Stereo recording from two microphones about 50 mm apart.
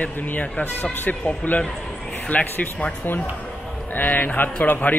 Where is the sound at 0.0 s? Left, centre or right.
Left.